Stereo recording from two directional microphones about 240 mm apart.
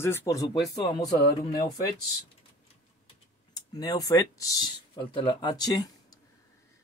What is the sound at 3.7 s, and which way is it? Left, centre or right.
Speech, centre.